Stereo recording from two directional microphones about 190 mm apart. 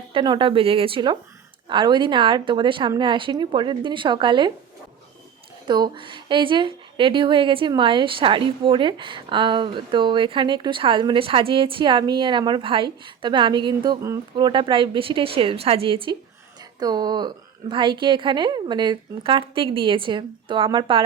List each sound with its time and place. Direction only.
0.1 s a woman's voice: 25° right (ahead or behind)
5.6 s a woman's voice: 25° right (ahead or behind)